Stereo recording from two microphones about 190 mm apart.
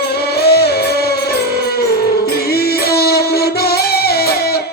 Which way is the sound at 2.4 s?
55° left (ahead or behind).